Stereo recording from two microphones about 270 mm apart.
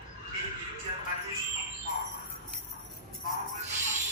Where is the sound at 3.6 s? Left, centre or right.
Right.